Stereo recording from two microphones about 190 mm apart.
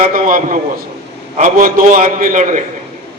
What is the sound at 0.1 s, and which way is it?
A man's voice, 45° right (ahead or behind).